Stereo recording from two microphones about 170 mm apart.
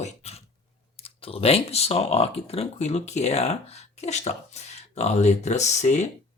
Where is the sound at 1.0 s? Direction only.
35° left (ahead or behind).